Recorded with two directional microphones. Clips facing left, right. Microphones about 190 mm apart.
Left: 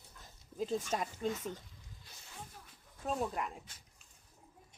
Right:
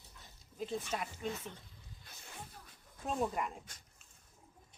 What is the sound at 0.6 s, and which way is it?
Speech, 40° left (ahead or behind).